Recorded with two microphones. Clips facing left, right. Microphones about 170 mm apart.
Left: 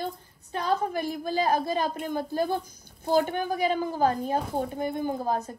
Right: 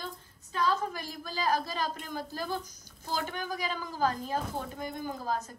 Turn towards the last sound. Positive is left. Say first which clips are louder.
# left 6 dB
turn(degrees=50)  # may be behind; listen again after turning